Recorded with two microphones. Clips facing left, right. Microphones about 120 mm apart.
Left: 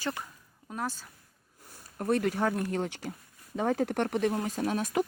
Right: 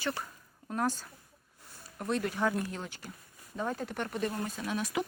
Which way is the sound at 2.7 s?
70° left (ahead or behind).